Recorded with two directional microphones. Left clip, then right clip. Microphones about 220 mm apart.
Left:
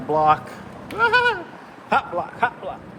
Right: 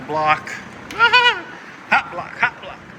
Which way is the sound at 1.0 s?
10° left (ahead or behind).